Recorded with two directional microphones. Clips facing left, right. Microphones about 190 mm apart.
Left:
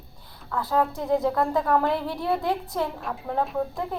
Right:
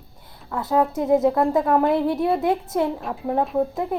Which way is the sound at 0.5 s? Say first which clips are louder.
Right 4 dB; 20° right (ahead or behind).